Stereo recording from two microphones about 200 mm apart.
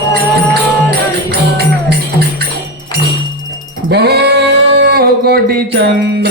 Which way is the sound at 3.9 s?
55° right (ahead or behind).